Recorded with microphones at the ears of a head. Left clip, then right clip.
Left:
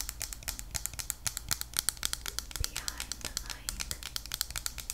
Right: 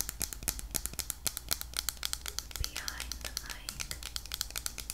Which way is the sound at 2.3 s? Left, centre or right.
Centre.